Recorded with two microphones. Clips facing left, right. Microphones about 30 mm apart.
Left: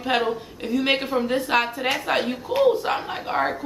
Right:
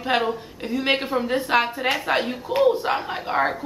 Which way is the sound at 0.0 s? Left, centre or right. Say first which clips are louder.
Even; centre.